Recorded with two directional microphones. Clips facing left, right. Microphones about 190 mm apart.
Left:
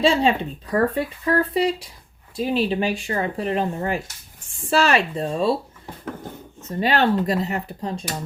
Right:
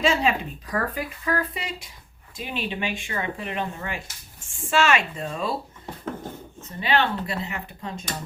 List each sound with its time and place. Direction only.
0.0 s speech: 30° left (ahead or behind)
6.7 s speech: 40° left (ahead or behind)